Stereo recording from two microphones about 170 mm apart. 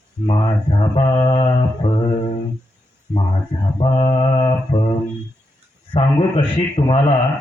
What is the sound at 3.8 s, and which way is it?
Mantra, 30° left (ahead or behind).